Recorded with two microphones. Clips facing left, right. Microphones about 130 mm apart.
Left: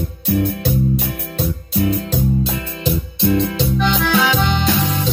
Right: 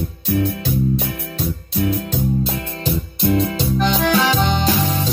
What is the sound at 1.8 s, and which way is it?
Music, centre (ahead or behind).